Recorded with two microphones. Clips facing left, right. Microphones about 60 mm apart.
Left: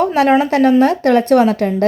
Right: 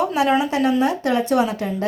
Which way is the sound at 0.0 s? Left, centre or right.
Left.